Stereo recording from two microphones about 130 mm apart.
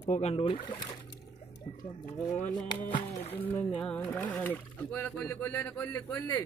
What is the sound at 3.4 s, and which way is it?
Speech, 15° left (ahead or behind).